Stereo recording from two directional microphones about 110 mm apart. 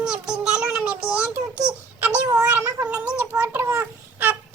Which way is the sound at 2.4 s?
15° right (ahead or behind).